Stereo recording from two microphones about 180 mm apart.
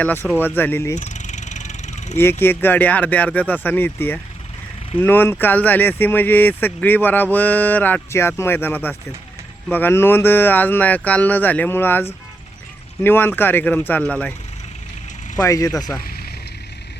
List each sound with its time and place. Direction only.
0.0 s speech: 10° left (ahead or behind)
0.9 s vehicle: 40° left (ahead or behind)
2.1 s speech: 10° left (ahead or behind)
15.4 s speech: 20° left (ahead or behind)
16.0 s vehicle: 55° left (ahead or behind)